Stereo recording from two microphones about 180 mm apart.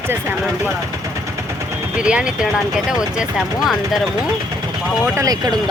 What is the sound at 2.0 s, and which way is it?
Speech, 5° right (ahead or behind).